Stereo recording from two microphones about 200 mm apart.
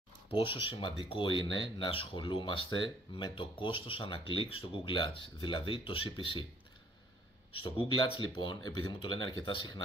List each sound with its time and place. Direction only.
0.3 s speech: 25° left (ahead or behind)
7.6 s speech: 25° left (ahead or behind)